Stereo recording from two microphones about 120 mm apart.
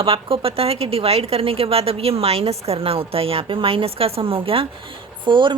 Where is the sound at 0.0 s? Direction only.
50° right (ahead or behind).